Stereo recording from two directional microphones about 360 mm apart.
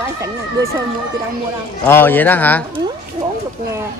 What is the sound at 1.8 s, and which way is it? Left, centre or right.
Speech, centre.